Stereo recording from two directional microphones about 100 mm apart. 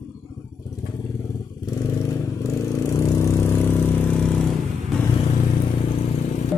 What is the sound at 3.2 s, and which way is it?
Vehicle, 25° left (ahead or behind).